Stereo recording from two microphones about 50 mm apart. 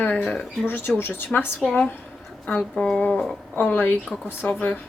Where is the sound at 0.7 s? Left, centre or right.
Left.